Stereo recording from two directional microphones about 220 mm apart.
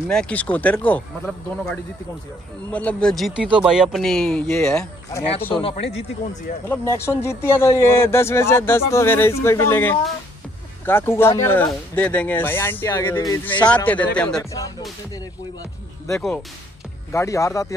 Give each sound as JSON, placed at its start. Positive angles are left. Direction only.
{"t": 0.1, "sound": "speech", "side_deg": 5}
{"t": 5.5, "sound": "speech", "side_deg": 25}
{"t": 6.7, "sound": "speech", "side_deg": 10}
{"t": 17.1, "sound": "speech", "side_deg": 15}